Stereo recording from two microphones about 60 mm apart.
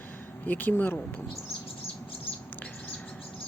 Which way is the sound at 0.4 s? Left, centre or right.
Left.